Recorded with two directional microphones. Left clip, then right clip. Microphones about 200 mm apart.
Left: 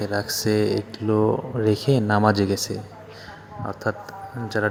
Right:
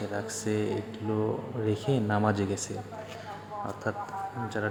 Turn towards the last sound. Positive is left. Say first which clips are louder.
# left 7 dB
turn(degrees=25)  # may be behind; listen again after turning